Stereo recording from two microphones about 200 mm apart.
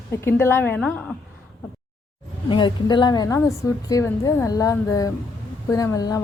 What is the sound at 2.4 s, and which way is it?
A woman's voice, 25° left (ahead or behind).